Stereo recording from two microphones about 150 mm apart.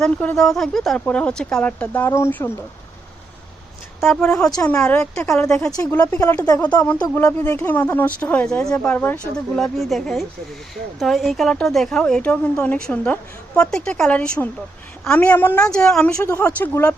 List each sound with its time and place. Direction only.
0.0 s speech: 10° left (ahead or behind)
4.0 s speech: 5° left (ahead or behind)
6.1 s speech: 20° left (ahead or behind)
6.6 s speech: 10° left (ahead or behind)
16.1 s speech: 20° left (ahead or behind)